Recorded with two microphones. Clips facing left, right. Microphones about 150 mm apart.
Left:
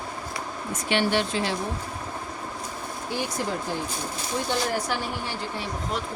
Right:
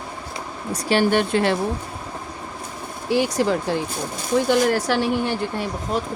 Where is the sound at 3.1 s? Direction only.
90° right.